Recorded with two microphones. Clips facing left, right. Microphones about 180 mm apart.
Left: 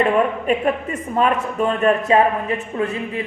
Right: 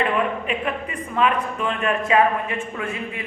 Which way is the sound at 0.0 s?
45° left (ahead or behind).